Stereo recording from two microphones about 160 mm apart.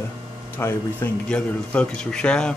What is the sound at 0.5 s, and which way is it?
Speech, 10° left (ahead or behind).